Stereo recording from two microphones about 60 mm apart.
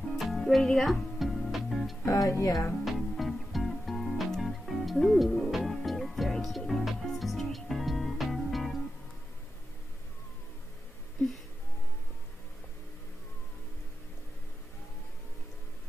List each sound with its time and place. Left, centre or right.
0.1 s music: centre
2.0 s speech: left
2.8 s music: centre